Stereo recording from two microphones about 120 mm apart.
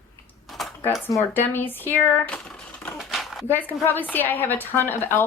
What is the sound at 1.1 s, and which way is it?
Speech, 20° left (ahead or behind).